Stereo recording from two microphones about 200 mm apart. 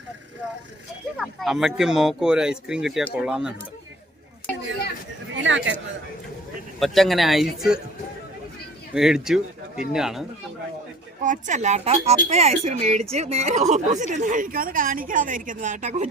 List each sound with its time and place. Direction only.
1.4 s speech: centre (ahead or behind)
5.3 s speech: 70° right (ahead or behind)
6.7 s speech: centre (ahead or behind)
8.9 s speech: 5° right (ahead or behind)
11.2 s a woman's voice: 40° right (ahead or behind)